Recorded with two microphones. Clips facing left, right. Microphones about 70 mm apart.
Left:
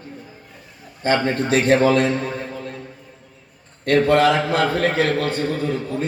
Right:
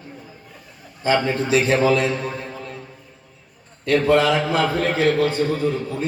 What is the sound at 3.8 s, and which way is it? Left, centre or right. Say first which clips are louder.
A man's voice: left 1 dB; left.